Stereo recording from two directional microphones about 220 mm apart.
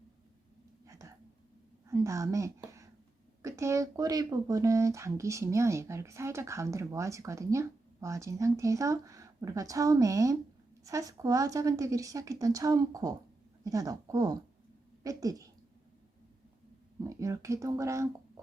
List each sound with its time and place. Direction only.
0.9 s a sound: 15° right (ahead or behind)
1.9 s a woman's voice: 15° right (ahead or behind)
17.0 s speech: 15° right (ahead or behind)